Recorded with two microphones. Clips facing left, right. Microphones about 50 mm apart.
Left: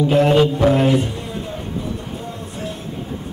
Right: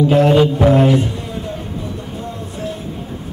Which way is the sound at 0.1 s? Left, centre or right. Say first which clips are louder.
Right 2 dB; centre.